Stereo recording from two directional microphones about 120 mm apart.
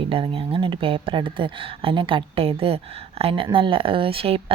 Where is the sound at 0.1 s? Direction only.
50° right (ahead or behind).